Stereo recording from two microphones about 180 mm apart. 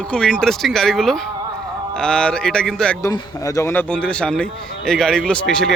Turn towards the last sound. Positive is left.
turn(degrees=5)  # may be behind; listen again after turning